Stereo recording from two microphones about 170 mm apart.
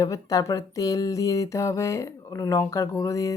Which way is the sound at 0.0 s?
20° left (ahead or behind).